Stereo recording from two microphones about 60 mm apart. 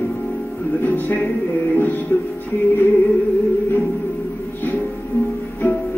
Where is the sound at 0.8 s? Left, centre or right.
Left.